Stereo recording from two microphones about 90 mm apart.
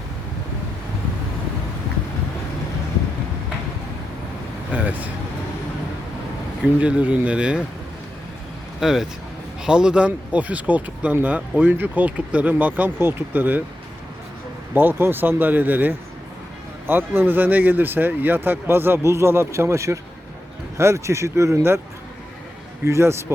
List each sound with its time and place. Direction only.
4.7 s vehicle: 15° right (ahead or behind)
6.7 s speech: 15° right (ahead or behind)
8.8 s speech: 5° right (ahead or behind); by 13.6 s 20° right (ahead or behind)
14.7 s speech: 20° right (ahead or behind)
22.8 s speech: 30° right (ahead or behind)